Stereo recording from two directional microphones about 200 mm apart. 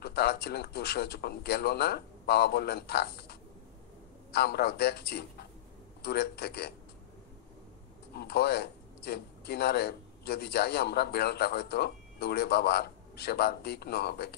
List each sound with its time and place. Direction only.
0.0 s a man's voice: 55° left (ahead or behind)
8.1 s a man's voice: 55° left (ahead or behind)